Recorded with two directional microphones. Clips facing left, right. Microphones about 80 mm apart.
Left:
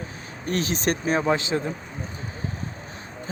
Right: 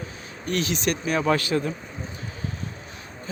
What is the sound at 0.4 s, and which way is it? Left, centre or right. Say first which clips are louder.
Speech: left 1 dB; left.